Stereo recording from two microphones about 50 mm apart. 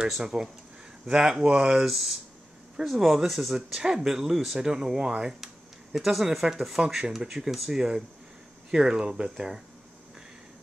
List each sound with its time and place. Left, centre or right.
0.2 s speech: centre
3.5 s speech: centre